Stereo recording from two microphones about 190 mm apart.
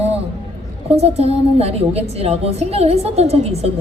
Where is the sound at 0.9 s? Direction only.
30° right (ahead or behind).